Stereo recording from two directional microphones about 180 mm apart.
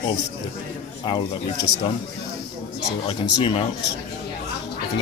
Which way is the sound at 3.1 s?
30° left (ahead or behind).